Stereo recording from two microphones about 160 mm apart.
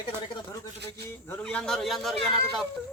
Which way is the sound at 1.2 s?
10° left (ahead or behind).